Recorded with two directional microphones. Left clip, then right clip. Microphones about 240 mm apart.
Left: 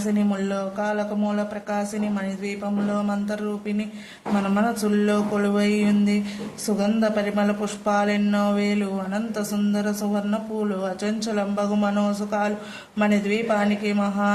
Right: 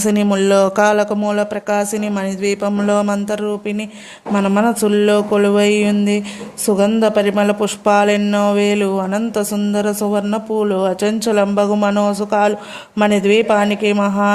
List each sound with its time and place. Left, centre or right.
0.1 s speech: right